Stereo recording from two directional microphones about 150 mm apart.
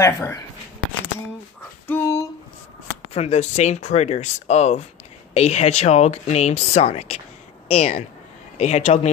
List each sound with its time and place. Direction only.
0.0 s speech: 20° left (ahead or behind)
1.9 s a sound: 15° left (ahead or behind)
3.1 s speech: 45° left (ahead or behind)